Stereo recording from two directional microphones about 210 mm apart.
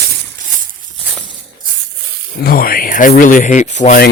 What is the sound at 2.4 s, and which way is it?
Speech, 45° left (ahead or behind).